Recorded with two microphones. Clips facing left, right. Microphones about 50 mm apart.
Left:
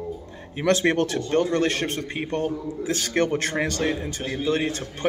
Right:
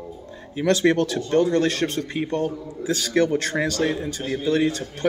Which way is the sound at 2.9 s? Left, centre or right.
Left.